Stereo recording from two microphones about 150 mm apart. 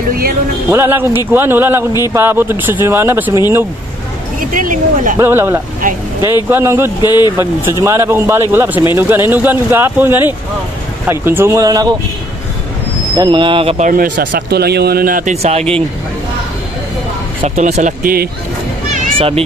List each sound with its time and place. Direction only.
0.1 s music: 90° right
0.7 s speech: 15° right (ahead or behind)
4.4 s speech: 65° right (ahead or behind)
5.2 s speech: 15° right (ahead or behind)
7.0 s speech: 25° left (ahead or behind)
7.8 s speech: 15° right (ahead or behind)
13.1 s speech: 30° right (ahead or behind)
13.7 s speech: 60° right (ahead or behind)
17.4 s speech: 45° right (ahead or behind)
18.0 s speech: 80° right
19.1 s speech: 40° right (ahead or behind)